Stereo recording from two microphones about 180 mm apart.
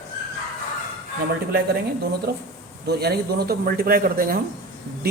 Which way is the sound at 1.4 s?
60° right (ahead or behind).